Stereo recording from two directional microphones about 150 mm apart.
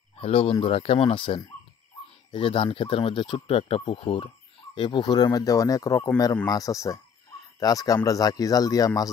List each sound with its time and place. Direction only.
0.2 s speech: 40° left (ahead or behind); by 9.1 s 25° left (ahead or behind)